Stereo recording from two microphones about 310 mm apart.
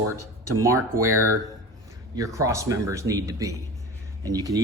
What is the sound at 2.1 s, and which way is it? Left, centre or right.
A man's voice, centre.